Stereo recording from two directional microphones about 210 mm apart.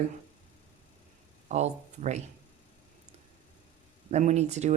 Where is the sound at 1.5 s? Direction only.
35° right (ahead or behind).